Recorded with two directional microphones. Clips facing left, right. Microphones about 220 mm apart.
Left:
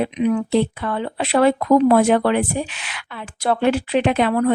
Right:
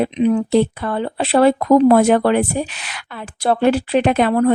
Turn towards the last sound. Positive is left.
turn(degrees=-40)  # may be behind; listen again after turning